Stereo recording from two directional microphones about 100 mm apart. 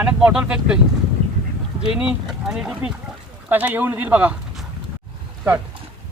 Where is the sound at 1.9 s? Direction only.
10° right (ahead or behind).